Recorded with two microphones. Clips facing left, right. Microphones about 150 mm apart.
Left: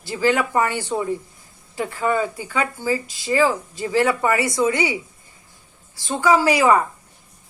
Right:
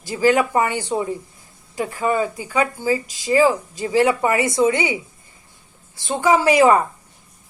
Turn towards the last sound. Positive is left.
turn(degrees=-25)  # may be behind; listen again after turning